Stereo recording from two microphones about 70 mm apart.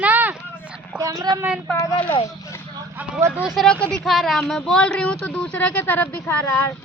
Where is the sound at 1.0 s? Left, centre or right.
Right.